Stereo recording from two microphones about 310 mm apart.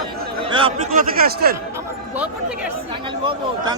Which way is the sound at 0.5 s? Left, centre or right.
Centre.